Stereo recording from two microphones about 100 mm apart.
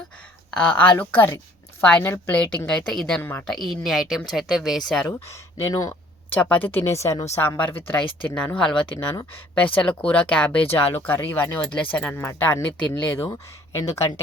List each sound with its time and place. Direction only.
0.5 s speech: 15° left (ahead or behind)
3.2 s speech: 15° left (ahead or behind)
3.5 s speech: centre (ahead or behind)
5.0 s speech: 30° left (ahead or behind)
6.3 s speech: 15° left (ahead or behind)
6.9 s a woman's voice: 30° left (ahead or behind)